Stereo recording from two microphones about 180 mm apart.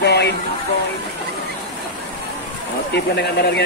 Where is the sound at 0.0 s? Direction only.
70° left (ahead or behind).